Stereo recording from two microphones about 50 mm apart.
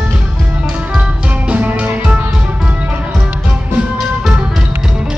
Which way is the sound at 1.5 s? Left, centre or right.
Right.